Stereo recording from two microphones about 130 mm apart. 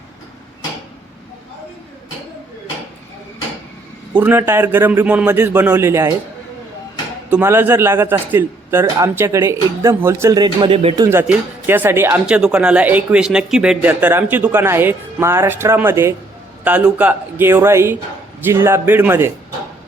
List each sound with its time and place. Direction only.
4.1 s speech: 15° right (ahead or behind)
7.3 s a man's voice: 15° right (ahead or behind); by 10.9 s 40° right (ahead or behind)
10.9 s a man's voice: 25° right (ahead or behind)
11.2 s speech: 15° right (ahead or behind)